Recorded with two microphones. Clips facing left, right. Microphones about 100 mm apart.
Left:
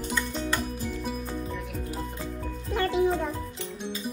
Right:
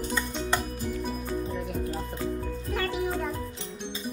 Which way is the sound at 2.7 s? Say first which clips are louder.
Left 5 dB; 25° left (ahead or behind).